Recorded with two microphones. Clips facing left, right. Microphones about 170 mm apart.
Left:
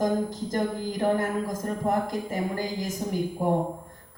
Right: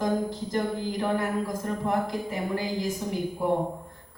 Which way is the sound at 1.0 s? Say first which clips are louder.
Left 3 dB; 45° left (ahead or behind).